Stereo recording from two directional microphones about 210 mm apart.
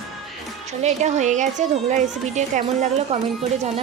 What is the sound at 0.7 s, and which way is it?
A woman's voice, 35° right (ahead or behind).